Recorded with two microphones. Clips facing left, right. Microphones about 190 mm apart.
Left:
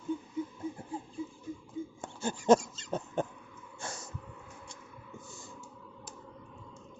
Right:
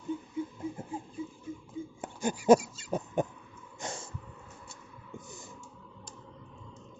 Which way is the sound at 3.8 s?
20° right (ahead or behind).